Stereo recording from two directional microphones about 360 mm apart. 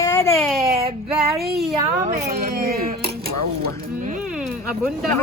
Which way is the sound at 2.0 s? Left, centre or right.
Right.